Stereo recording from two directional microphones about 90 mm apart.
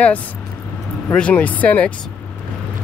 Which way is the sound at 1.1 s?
15° left (ahead or behind).